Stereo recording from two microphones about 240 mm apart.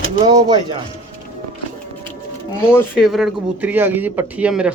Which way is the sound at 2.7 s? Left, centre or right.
Centre.